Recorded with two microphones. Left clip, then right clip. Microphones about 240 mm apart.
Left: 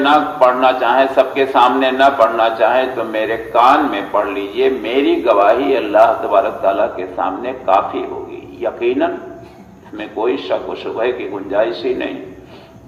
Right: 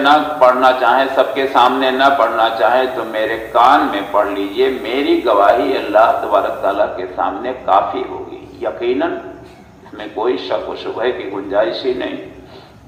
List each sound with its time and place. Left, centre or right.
0.0 s a man's voice: left